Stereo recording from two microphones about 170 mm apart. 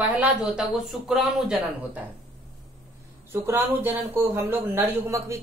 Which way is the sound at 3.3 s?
15° right (ahead or behind).